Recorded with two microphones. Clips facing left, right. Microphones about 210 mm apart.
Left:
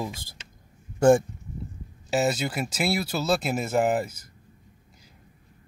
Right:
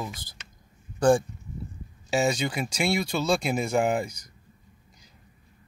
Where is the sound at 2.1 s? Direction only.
5° left (ahead or behind).